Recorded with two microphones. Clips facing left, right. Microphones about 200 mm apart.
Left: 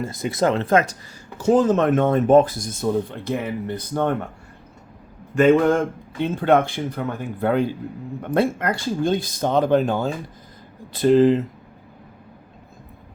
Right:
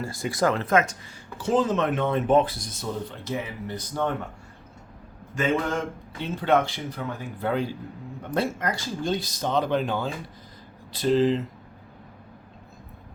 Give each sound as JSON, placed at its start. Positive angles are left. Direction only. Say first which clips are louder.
{"t": 0.0, "sound": "speech", "louder": "left 4 dB", "side_deg": 20}
{"t": 1.4, "sound": "speech", "louder": "left 6 dB", "side_deg": 45}
{"t": 5.3, "sound": "a man's voice", "louder": "left 10 dB", "side_deg": 55}